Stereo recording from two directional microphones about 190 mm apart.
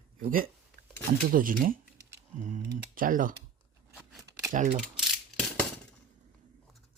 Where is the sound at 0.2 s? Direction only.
50° right (ahead or behind).